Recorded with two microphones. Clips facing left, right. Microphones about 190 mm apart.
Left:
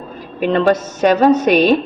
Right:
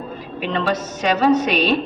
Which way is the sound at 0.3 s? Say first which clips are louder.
Left 8 dB; 50° left (ahead or behind).